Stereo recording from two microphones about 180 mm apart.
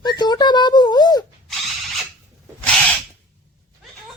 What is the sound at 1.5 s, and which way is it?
Drill, centre (ahead or behind).